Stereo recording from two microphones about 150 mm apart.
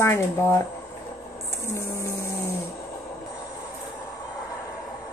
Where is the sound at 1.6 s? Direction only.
20° left (ahead or behind).